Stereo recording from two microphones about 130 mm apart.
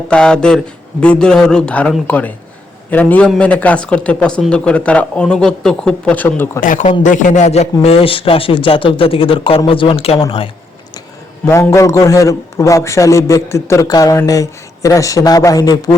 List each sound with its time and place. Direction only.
0.1 s speech: 5° left (ahead or behind)
6.6 s a man's voice: 80° left; by 10.5 s 45° left (ahead or behind)
11.7 s a man's voice: 20° left (ahead or behind)